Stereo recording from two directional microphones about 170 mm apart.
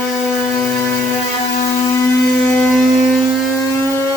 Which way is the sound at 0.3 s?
10° left (ahead or behind).